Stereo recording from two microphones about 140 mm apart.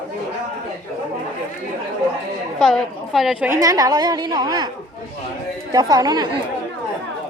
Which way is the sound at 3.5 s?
25° right (ahead or behind).